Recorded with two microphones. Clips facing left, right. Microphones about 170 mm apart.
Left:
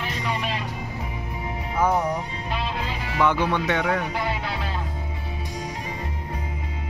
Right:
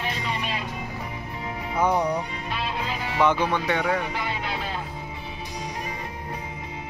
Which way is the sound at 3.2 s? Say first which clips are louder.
Even; 20° right (ahead or behind).